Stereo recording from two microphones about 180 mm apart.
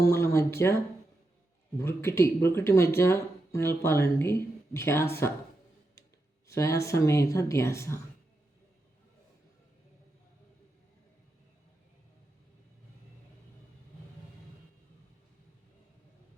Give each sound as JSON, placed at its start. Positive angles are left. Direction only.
{"t": 0.0, "sound": "a sound", "side_deg": 15}
{"t": 1.8, "sound": "speech", "side_deg": 15}
{"t": 6.5, "sound": "speech", "side_deg": 15}